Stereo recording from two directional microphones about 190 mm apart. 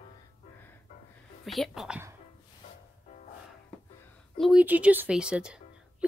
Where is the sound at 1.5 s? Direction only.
Centre (ahead or behind).